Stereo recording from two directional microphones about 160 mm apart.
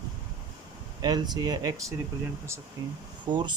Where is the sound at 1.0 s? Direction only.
25° right (ahead or behind).